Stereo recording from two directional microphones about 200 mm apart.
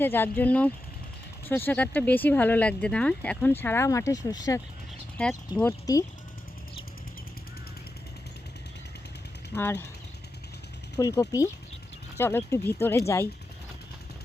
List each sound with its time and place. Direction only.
0.0 s speech: 10° left (ahead or behind)
5.1 s speech: 5° left (ahead or behind)
9.6 s speech: 10° left (ahead or behind)
10.9 s speech: 15° left (ahead or behind)